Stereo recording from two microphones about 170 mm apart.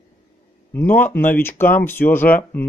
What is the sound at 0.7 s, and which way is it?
Speech, 10° left (ahead or behind).